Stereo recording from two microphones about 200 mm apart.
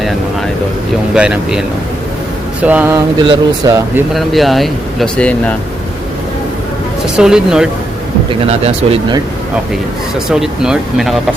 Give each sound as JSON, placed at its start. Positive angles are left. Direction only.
{"t": 1.1, "sound": "speech", "side_deg": -5}
{"t": 2.6, "sound": "speech", "side_deg": -10}
{"t": 4.1, "sound": "speech", "side_deg": 0}
{"t": 7.2, "sound": "speech", "side_deg": -5}
{"t": 8.4, "sound": "speech", "side_deg": -30}
{"t": 10.2, "sound": "speech", "side_deg": -5}